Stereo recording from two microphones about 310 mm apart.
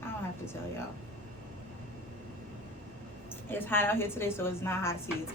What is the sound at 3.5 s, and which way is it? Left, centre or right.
A woman's voice, centre.